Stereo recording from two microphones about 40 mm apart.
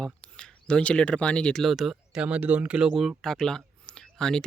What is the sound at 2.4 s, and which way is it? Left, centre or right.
Speech, right.